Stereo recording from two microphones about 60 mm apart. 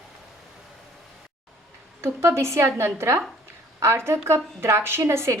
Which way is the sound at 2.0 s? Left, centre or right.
Right.